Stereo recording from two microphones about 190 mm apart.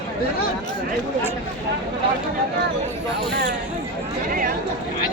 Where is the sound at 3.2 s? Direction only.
60° right (ahead or behind).